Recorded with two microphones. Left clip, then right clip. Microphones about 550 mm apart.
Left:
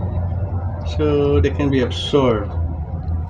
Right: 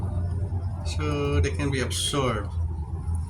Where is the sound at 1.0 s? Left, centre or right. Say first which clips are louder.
Left 11 dB; right.